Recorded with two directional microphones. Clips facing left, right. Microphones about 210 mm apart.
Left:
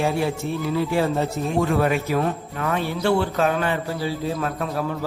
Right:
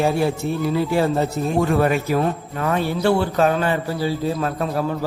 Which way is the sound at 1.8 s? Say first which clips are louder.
Right 2 dB; 40° right (ahead or behind).